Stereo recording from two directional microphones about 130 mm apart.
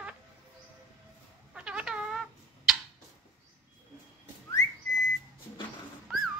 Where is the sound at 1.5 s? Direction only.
10° right (ahead or behind).